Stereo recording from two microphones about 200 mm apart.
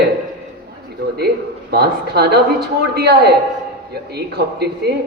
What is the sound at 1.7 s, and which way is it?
A man's voice, 55° right (ahead or behind).